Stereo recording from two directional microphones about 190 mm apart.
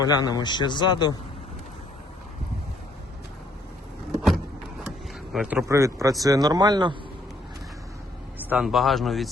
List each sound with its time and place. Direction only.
0.0 s a man's voice: 20° left (ahead or behind)
5.3 s speech: centre (ahead or behind)
5.6 s a man's voice: 15° right (ahead or behind)
8.4 s speech: 5° right (ahead or behind)